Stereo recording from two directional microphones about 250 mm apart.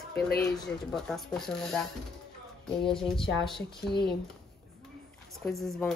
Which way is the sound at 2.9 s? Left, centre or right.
Centre.